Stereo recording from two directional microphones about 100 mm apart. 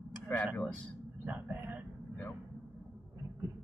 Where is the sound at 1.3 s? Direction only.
15° right (ahead or behind).